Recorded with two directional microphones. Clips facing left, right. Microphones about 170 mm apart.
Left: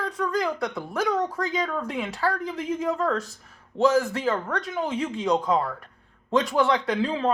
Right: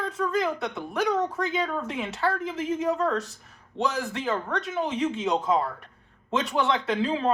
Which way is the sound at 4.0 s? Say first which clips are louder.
Left 2 dB; 20° right (ahead or behind).